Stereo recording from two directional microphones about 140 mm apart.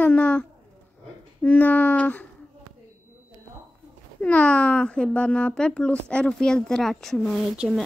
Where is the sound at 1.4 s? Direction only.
15° left (ahead or behind).